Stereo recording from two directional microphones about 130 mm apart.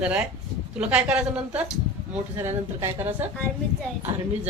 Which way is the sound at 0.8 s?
10° right (ahead or behind).